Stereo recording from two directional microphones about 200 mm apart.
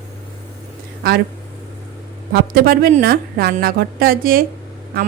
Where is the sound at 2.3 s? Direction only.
50° right (ahead or behind).